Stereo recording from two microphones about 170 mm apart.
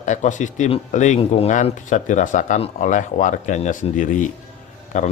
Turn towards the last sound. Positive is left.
turn(degrees=45)  # may be behind; listen again after turning